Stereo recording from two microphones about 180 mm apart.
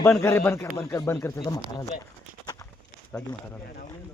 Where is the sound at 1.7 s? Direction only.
20° left (ahead or behind).